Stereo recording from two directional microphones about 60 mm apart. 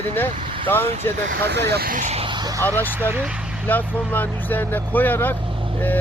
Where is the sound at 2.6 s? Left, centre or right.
Left.